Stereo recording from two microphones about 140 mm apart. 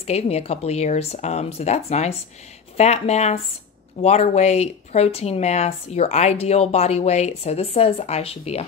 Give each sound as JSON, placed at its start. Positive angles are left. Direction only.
{"t": 0.0, "sound": "speech", "side_deg": 50}